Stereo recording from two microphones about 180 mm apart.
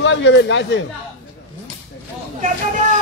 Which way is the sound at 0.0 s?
90° left.